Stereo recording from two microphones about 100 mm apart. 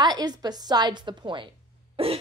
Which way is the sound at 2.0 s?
70° right (ahead or behind).